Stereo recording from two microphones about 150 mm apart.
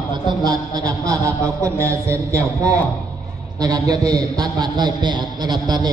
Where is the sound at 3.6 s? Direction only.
25° right (ahead or behind).